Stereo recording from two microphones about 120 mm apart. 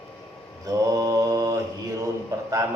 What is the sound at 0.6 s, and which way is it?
Speech, 25° right (ahead or behind).